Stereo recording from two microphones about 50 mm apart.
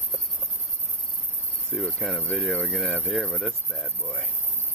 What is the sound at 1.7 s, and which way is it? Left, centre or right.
Speech, centre.